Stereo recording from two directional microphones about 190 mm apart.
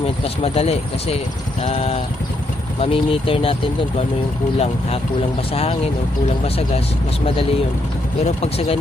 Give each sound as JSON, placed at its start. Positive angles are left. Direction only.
{"t": 0.4, "sound": "speech", "side_deg": 30}
{"t": 8.2, "sound": "speech", "side_deg": 35}